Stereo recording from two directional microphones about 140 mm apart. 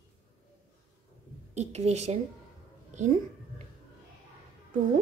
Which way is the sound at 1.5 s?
50° right (ahead or behind).